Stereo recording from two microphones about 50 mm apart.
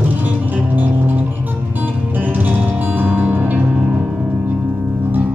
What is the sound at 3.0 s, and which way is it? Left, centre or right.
Music, right.